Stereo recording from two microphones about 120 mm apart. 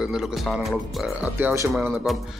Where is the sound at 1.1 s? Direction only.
15° right (ahead or behind).